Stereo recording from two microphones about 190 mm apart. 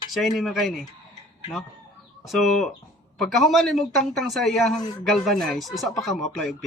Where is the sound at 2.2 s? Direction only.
Centre (ahead or behind).